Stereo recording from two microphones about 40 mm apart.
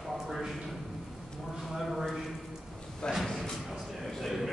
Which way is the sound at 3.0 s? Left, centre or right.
Centre.